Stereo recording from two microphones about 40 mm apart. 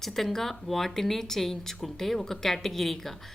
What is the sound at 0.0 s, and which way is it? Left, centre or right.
Speech, centre.